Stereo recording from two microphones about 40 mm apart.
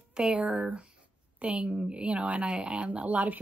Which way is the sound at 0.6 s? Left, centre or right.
Right.